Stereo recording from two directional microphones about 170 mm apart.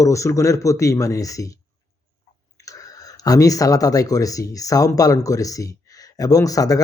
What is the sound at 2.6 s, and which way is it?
A man's voice, 20° left (ahead or behind).